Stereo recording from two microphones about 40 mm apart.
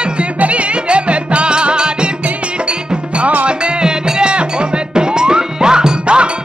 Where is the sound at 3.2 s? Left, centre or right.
Right.